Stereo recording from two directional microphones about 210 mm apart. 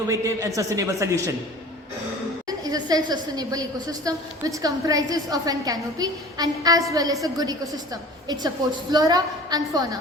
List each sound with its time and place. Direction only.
0.1 s a woman's voice: 15° right (ahead or behind)
2.5 s a woman's voice: 20° right (ahead or behind)